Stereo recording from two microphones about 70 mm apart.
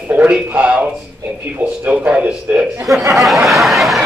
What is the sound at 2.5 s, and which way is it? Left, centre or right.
Chuckle, right.